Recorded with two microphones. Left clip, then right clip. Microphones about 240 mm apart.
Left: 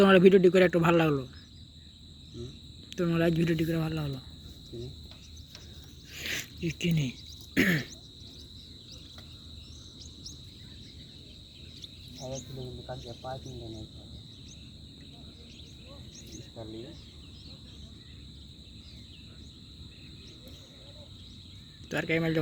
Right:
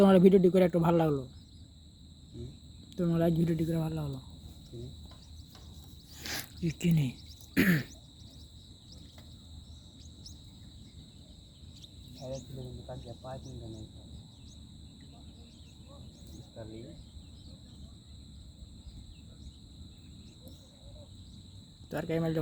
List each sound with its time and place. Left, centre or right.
0.0 s speech: centre
2.9 s speech: centre
6.1 s throat clearing: right
12.5 s speech: centre
13.4 s speech: right
21.8 s speech: centre